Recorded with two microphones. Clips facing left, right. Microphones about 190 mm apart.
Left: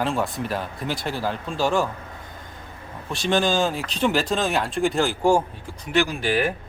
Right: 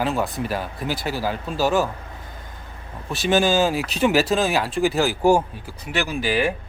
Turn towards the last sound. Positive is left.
turn(degrees=-5)  # may be behind; listen again after turning